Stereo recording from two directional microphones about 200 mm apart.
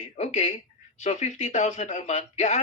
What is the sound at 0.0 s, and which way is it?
Speech, 35° left (ahead or behind).